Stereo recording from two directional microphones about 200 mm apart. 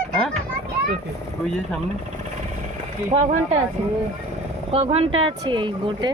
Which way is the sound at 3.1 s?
35° right (ahead or behind).